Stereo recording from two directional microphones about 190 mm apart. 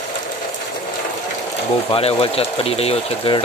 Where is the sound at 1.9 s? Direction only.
30° left (ahead or behind).